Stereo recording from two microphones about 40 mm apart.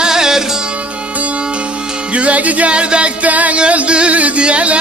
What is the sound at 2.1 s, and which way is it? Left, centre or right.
Music, right.